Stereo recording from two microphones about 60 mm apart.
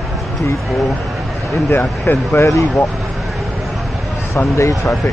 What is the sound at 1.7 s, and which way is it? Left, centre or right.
Speech, left.